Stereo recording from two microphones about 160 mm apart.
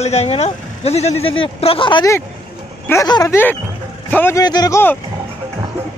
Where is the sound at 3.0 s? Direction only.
25° left (ahead or behind).